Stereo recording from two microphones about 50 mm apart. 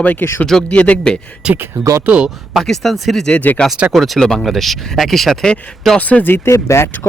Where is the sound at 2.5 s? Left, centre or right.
Centre.